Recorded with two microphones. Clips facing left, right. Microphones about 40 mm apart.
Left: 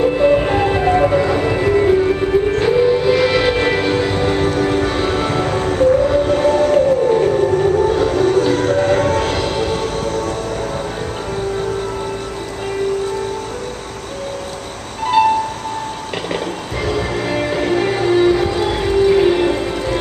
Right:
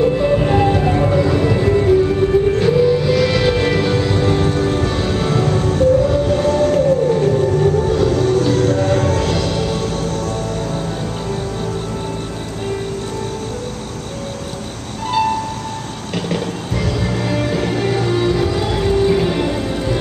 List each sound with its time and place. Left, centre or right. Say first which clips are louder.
0.0 s music: left 2 dB; centre
10.0 s music: left 2 dB; left
15.0 s music: left 4 dB; left
16.8 s music: left 2 dB; left